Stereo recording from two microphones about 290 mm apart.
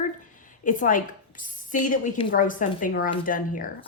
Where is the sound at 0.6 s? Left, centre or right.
Left.